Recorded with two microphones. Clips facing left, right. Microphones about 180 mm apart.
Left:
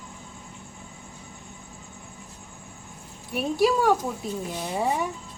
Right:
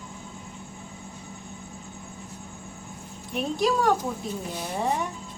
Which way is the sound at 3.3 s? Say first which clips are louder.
Left 2 dB; 5° left (ahead or behind).